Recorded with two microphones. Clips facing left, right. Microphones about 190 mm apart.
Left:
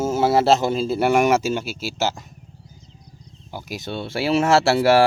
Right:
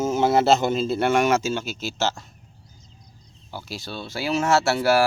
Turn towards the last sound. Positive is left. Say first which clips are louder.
# left 4 dB
turn(degrees=30)  # may be behind; listen again after turning